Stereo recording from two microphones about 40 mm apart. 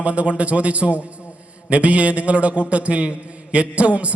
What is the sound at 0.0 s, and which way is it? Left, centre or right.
A man's voice, right.